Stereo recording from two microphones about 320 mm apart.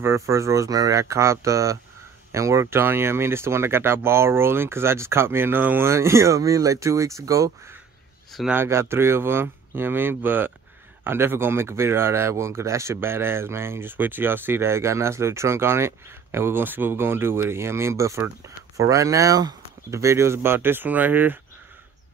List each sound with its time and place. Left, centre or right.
0.0 s speech: centre